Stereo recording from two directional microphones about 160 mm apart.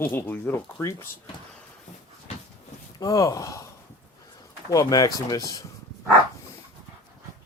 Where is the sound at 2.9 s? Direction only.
20° left (ahead or behind).